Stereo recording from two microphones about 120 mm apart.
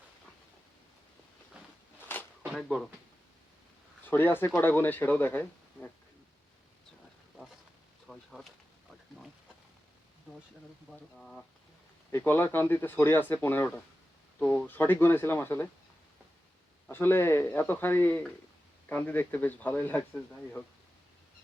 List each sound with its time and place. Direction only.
2.0 s a sound: 15° left (ahead or behind)
2.4 s a sound: 5° left (ahead or behind)
4.0 s speech: 15° left (ahead or behind)
8.0 s speech: centre (ahead or behind)
10.9 s speech: 5° left (ahead or behind)
12.1 s speech: 20° left (ahead or behind)
16.9 s speech: 20° left (ahead or behind)